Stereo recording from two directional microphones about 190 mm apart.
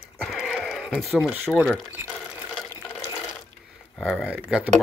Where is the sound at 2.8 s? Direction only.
10° left (ahead or behind).